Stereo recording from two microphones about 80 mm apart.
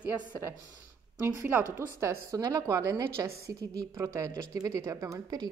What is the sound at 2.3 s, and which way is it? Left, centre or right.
A woman's voice, right.